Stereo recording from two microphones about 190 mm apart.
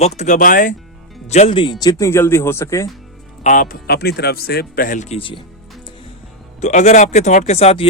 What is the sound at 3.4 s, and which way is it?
Speech, 45° left (ahead or behind).